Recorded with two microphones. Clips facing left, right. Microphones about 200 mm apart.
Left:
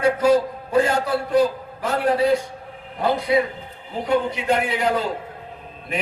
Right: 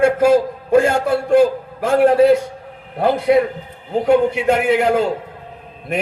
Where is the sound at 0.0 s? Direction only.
50° right (ahead or behind).